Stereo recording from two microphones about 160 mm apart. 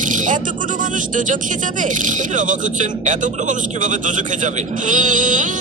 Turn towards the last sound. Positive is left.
turn(degrees=-55)  # may be behind; listen again after turning